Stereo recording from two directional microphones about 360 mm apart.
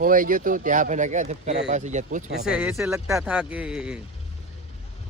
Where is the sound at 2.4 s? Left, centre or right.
Centre.